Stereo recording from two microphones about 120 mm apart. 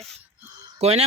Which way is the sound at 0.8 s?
60° right (ahead or behind).